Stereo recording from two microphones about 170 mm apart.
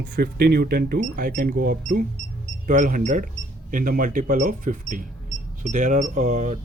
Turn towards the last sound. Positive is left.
turn(degrees=-45)  # may be behind; listen again after turning